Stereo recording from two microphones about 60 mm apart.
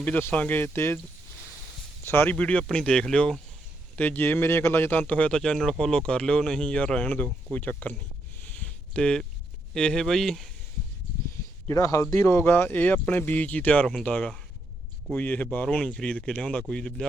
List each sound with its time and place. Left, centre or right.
0.2 s speech: left
2.0 s speech: left
2.3 s speech: left
3.9 s speech: left
4.9 s speech: left
8.5 s a sound: centre
9.7 s speech: centre
11.7 s speech: left
12.2 s speech: left
16.6 s speech: centre